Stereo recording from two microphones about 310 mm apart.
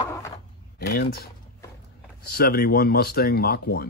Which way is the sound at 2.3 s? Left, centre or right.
Left.